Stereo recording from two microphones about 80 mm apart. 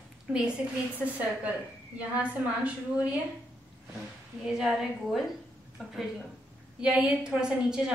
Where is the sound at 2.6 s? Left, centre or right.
Centre.